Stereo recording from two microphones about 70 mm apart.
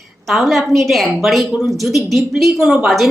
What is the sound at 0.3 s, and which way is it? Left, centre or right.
Speech, centre.